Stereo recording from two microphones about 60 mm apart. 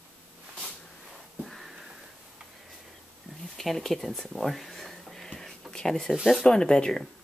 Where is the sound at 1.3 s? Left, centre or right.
Centre.